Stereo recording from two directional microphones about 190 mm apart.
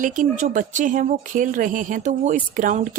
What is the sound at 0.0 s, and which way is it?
Speech, 45° right (ahead or behind).